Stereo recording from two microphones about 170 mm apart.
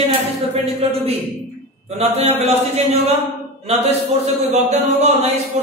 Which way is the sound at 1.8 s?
35° right (ahead or behind).